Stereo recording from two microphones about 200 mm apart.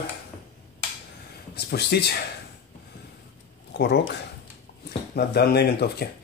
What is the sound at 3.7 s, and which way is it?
Speech, 55° left (ahead or behind).